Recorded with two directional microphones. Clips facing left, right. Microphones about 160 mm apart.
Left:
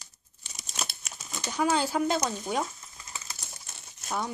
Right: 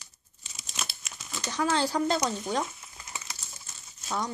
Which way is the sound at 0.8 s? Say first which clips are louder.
Left 1 dB; 40° left (ahead or behind).